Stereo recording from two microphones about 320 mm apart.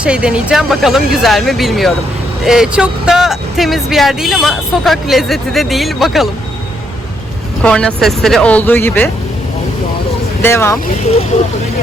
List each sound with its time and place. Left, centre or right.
0.0 s speech: centre
7.6 s speech: centre
10.4 s speech: centre
11.0 s speech: centre